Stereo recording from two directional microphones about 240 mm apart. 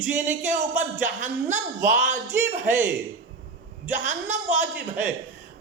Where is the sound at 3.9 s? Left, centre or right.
Right.